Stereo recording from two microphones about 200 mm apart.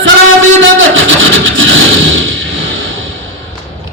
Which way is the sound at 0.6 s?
70° right (ahead or behind).